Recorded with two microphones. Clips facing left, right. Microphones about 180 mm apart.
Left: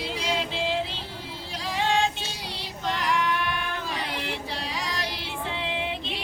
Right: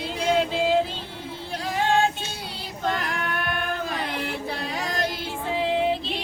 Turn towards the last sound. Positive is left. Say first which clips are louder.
# right 8 dB
turn(degrees=-40)  # may be behind; listen again after turning